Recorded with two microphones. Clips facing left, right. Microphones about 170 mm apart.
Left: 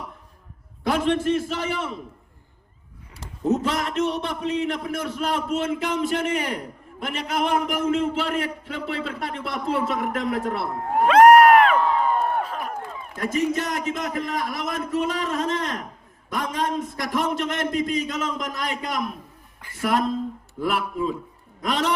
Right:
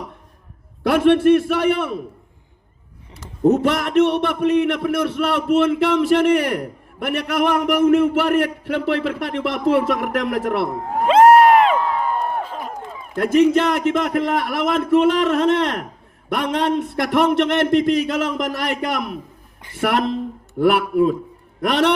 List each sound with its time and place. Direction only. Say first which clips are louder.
0.9 s a man's voice: right 8 dB; 65° right (ahead or behind)
3.4 s a man's voice: right 7 dB; 65° right (ahead or behind)
11.0 s crowd: right 1 dB; 25° right (ahead or behind)
12.0 s a sound: even; centre (ahead or behind)
12.4 s a sound: even; 25° right (ahead or behind)
13.1 s a man's voice: right 9 dB; 65° right (ahead or behind)